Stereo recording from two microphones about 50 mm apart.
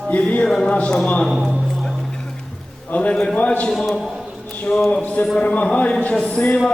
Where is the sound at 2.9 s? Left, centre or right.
Left.